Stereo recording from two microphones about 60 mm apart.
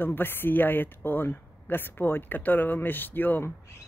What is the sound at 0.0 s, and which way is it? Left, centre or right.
Speech, left.